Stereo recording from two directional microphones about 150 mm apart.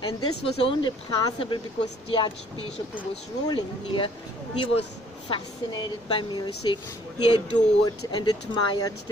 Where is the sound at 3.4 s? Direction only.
30° left (ahead or behind).